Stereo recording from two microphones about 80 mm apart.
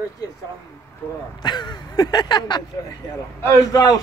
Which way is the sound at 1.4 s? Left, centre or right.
Left.